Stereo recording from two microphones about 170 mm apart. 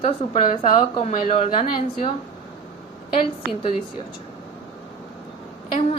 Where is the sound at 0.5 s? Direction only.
35° left (ahead or behind).